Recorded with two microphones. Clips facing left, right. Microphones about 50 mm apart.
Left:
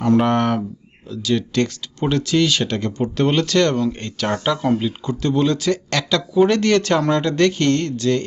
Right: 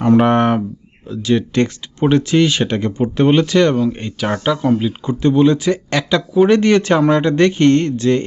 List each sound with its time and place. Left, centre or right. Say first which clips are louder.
0.0 s speech: right 4 dB; right